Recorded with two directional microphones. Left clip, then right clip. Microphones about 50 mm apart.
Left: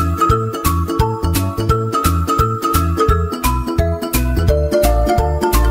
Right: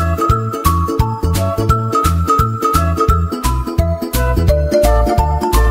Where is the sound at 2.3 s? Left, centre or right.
Right.